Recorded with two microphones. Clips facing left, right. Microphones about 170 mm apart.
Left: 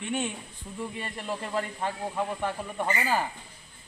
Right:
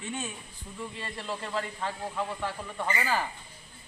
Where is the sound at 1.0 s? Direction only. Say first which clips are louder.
Left 2 dB; 15° left (ahead or behind).